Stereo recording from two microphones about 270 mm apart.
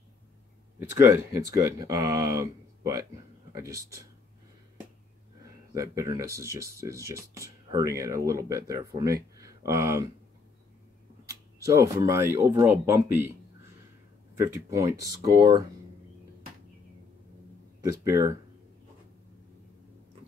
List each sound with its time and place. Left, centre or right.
0.7 s speech: centre
5.4 s speech: centre
11.6 s speech: centre
14.3 s speech: centre
18.0 s speech: centre